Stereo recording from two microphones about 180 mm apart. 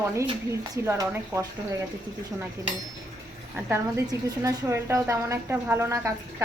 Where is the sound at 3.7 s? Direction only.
15° right (ahead or behind).